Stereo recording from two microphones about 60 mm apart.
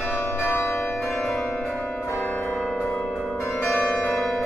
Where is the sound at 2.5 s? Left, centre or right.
Centre.